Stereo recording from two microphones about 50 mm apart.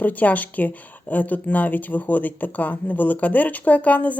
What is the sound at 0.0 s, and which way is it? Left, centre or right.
A woman's voice, left.